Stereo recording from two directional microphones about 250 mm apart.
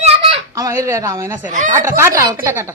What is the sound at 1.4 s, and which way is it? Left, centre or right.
Speech, right.